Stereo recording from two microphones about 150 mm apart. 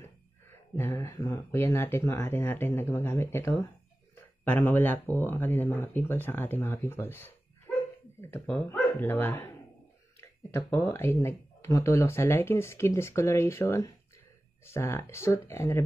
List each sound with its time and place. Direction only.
0.0 s a sound: 15° left (ahead or behind)
1.1 s speech: 30° left (ahead or behind)
1.5 s speech: 15° left (ahead or behind)
10.5 s speech: 20° left (ahead or behind)